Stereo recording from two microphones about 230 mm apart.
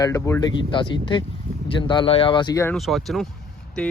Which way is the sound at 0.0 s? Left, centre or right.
Centre.